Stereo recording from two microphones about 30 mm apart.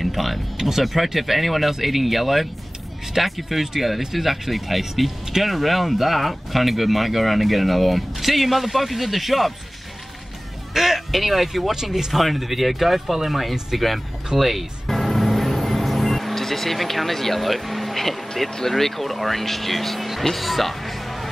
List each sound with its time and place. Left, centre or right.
0.0 s a sound: centre
0.6 s speech: centre
10.7 s speech: centre
11.7 s speech: centre
12.1 s speech: centre
14.3 s music: centre
18.7 s speech: centre